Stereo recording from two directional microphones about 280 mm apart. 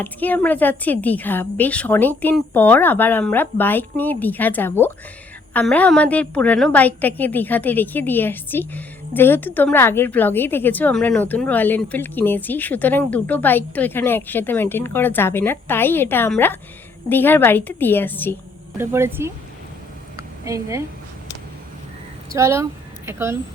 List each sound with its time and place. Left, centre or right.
0.0 s a woman's voice: centre
18.8 s speech: centre
20.1 s a sound: centre
22.3 s speech: centre